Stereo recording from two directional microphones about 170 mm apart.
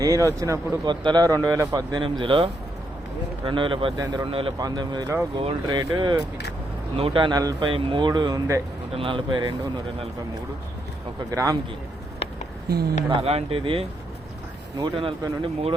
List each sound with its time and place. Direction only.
0.0 s speech: 20° right (ahead or behind)
11.3 s speech: 20° right (ahead or behind)
13.1 s speech: 35° right (ahead or behind)